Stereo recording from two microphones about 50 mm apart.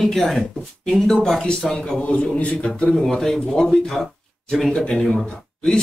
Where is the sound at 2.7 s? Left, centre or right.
Centre.